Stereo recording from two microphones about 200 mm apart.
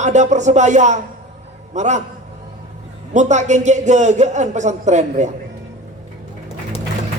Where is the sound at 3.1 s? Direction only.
35° right (ahead or behind).